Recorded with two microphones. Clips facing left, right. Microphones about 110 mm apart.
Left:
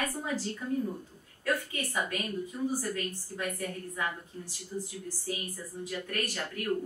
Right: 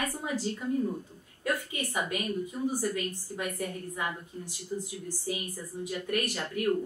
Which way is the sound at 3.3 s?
15° right (ahead or behind).